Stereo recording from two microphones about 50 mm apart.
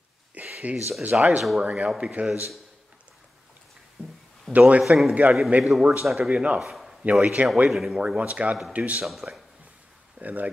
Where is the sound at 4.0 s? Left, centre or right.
Right.